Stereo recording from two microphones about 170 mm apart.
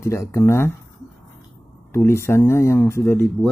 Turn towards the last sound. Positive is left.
turn(degrees=10)  # may be behind; listen again after turning